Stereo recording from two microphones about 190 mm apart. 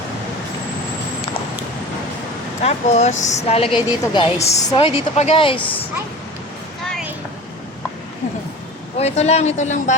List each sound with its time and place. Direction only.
2.6 s a woman's voice: 35° left (ahead or behind)
9.0 s a woman's voice: 35° left (ahead or behind)